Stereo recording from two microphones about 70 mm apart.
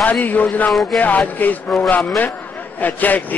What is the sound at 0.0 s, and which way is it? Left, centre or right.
Speech, left.